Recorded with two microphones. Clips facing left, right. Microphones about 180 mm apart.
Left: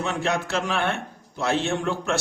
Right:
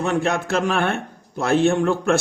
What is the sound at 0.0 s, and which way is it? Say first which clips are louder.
A man's voice: right 4 dB; 50° right (ahead or behind).